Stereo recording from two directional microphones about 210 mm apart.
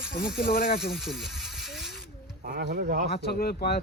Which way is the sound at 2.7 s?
40° right (ahead or behind).